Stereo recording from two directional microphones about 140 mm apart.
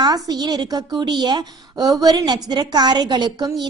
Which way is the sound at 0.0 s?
30° right (ahead or behind).